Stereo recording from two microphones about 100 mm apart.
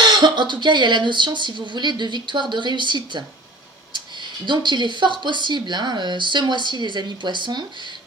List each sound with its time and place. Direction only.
0.0 s speech: 50° right (ahead or behind)
4.5 s speech: 50° right (ahead or behind)